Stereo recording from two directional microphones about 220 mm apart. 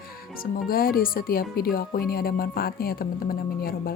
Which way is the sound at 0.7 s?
40° left (ahead or behind).